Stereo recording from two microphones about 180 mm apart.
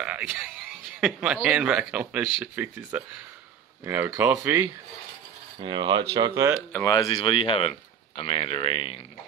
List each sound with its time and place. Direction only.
0.0 s speech: 5° right (ahead or behind)
5.6 s speech: 25° right (ahead or behind)
6.7 s speech: 15° left (ahead or behind); by 9.0 s 30° left (ahead or behind)